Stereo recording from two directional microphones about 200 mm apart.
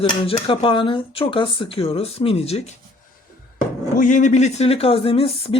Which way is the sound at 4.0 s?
40° left (ahead or behind).